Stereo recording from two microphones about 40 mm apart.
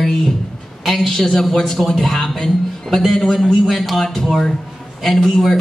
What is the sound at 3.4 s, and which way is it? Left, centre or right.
Speech, centre.